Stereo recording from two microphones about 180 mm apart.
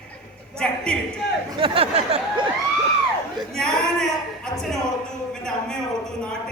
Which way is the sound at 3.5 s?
5° left (ahead or behind).